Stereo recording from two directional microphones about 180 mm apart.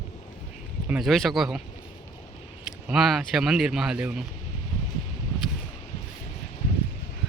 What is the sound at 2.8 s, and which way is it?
Speech, centre (ahead or behind).